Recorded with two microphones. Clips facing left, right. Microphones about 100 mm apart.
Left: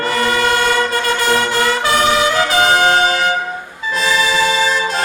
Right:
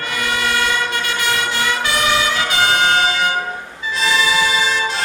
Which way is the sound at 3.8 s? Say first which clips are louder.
Left 2 dB; 45° left (ahead or behind).